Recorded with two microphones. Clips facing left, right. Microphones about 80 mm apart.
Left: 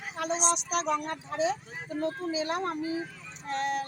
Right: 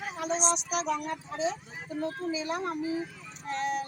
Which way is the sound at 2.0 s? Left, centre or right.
Left.